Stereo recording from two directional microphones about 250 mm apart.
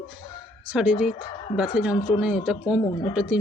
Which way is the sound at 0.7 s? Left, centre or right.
Centre.